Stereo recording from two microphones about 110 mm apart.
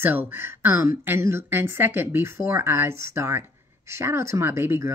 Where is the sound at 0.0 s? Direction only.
20° right (ahead or behind).